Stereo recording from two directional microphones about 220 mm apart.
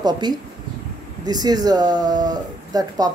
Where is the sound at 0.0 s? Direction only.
20° right (ahead or behind).